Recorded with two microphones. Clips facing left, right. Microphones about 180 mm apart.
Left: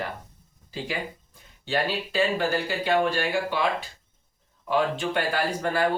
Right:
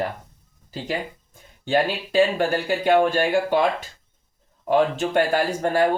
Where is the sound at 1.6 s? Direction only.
50° right (ahead or behind).